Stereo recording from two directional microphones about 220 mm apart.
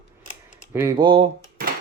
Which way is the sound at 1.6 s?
40° right (ahead or behind).